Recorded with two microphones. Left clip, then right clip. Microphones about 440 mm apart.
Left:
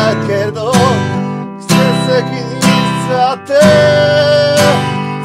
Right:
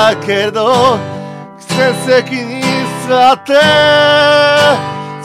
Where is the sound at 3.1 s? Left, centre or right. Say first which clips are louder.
Right 4 dB; right.